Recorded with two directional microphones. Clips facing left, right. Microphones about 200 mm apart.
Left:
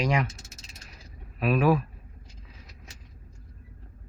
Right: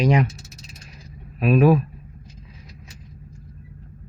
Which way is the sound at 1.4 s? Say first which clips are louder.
Right 6 dB; 20° right (ahead or behind).